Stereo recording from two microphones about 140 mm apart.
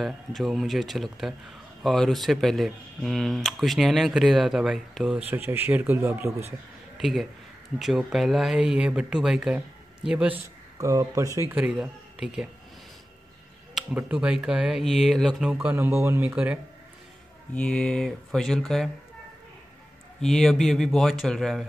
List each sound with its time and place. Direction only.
0.0 s speech: centre (ahead or behind); by 6.3 s 20° right (ahead or behind)
7.0 s a man's voice: centre (ahead or behind); by 11.5 s 20° right (ahead or behind)
11.5 s speech: 5° right (ahead or behind)
13.9 s speech: 10° right (ahead or behind)
15.5 s speech: 15° right (ahead or behind)
17.6 s speech: 10° left (ahead or behind)
20.2 s speech: centre (ahead or behind)